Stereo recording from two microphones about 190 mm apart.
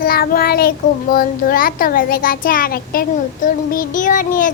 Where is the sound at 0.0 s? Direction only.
50° left (ahead or behind).